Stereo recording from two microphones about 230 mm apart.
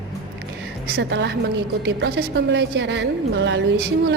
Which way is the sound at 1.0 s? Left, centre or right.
Right.